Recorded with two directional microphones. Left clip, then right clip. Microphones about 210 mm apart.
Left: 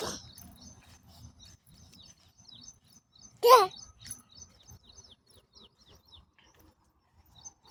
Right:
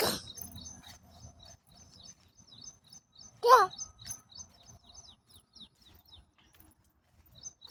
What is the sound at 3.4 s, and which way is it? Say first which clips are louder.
Bird: left 2 dB; 40° left (ahead or behind).